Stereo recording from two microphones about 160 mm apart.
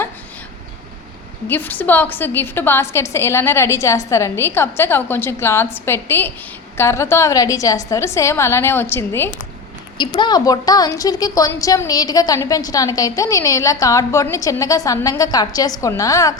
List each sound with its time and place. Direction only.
1.5 s a woman's voice: 10° left (ahead or behind)
10.0 s a woman's voice: 30° left (ahead or behind)